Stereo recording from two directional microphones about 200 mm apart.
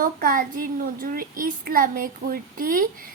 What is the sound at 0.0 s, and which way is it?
Speech, 45° right (ahead or behind).